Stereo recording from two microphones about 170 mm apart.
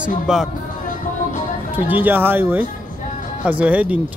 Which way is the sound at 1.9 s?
10° right (ahead or behind).